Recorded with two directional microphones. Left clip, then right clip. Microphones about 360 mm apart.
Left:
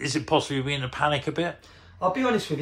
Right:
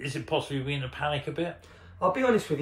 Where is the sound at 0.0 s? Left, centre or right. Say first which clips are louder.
Left 6 dB; centre.